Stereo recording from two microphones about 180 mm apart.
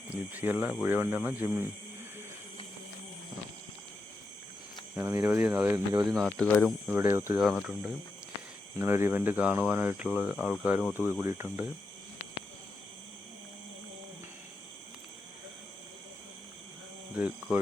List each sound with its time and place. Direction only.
0.1 s speech: 10° right (ahead or behind)
4.9 s speech: 15° right (ahead or behind)
6.1 s speech: centre (ahead or behind)
6.8 s speech: 15° right (ahead or behind)
7.4 s speech: centre (ahead or behind)
8.8 s speech: 15° right (ahead or behind)
17.2 s speech: 5° right (ahead or behind)